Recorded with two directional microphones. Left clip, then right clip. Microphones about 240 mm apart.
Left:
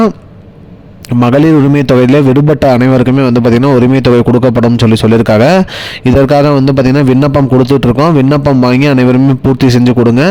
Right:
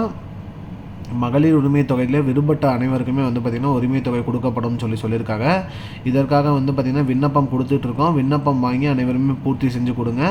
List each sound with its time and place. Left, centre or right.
1.2 s a man's voice: left